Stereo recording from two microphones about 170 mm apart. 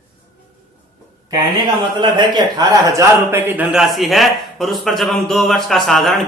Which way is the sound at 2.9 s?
15° right (ahead or behind).